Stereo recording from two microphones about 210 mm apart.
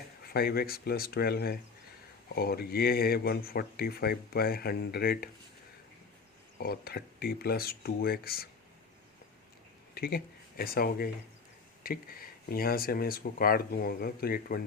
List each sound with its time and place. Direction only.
0.2 s speech: 45° left (ahead or behind)
6.6 s speech: 45° left (ahead or behind)
9.9 s speech: 45° left (ahead or behind)